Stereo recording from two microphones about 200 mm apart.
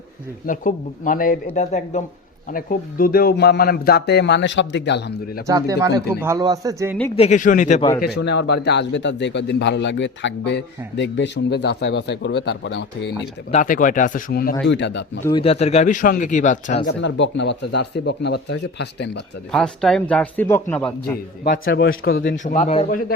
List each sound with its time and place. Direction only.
0.4 s a man's voice: 40° left (ahead or behind); by 5.4 s 55° left (ahead or behind)
5.5 s speech: 15° right (ahead or behind)
7.2 s speech: 35° left (ahead or behind)
8.0 s a man's voice: 55° left (ahead or behind)
13.5 s speech: 40° left (ahead or behind)
14.7 s a man's voice: 60° left (ahead or behind)
15.3 s speech: 25° left (ahead or behind)
16.8 s a man's voice: 65° left (ahead or behind)
19.5 s a man's voice: 5° left (ahead or behind)
21.6 s speech: 65° left (ahead or behind)
21.8 s a man's voice: 50° left (ahead or behind)
22.4 s speech: 35° left (ahead or behind)
22.9 s a man's voice: 45° left (ahead or behind)